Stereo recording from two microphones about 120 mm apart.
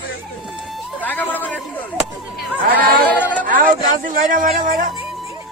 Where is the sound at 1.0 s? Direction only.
15° left (ahead or behind).